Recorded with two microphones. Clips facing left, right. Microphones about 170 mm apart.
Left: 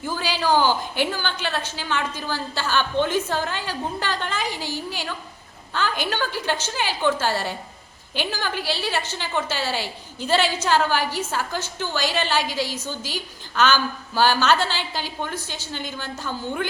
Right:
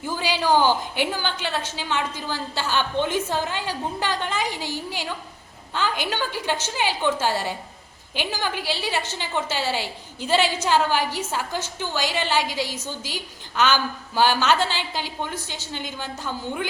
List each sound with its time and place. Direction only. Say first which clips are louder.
0.0 s a woman's voice: even; 20° right (ahead or behind)